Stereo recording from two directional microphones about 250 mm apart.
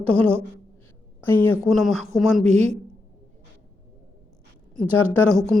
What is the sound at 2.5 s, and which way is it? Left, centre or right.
Speech, right.